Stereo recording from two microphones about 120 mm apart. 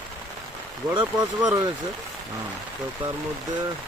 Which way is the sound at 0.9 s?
35° right (ahead or behind).